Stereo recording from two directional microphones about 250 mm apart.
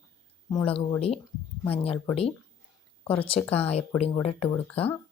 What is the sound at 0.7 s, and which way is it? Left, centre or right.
Speech, left.